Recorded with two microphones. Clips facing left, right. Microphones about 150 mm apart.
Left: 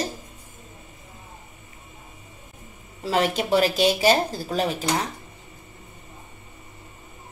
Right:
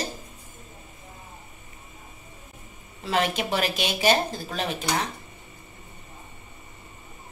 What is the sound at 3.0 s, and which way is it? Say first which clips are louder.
Speech: left 3 dB; 35° left (ahead or behind).